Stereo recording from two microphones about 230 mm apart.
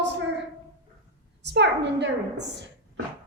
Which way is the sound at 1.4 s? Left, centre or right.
Right.